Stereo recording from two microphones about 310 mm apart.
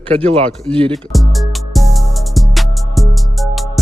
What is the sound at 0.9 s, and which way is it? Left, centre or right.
Music, centre.